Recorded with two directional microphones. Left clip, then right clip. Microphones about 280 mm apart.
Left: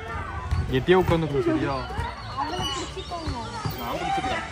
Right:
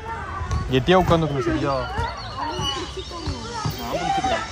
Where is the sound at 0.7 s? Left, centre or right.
Right.